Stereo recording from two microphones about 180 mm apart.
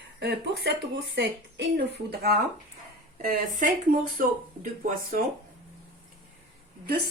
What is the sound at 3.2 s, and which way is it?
Speech, 45° right (ahead or behind).